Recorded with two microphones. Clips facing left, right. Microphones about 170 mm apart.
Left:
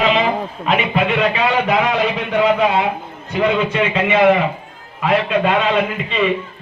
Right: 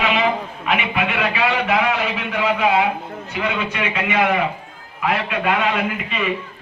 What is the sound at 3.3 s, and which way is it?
A man's voice, 30° left (ahead or behind).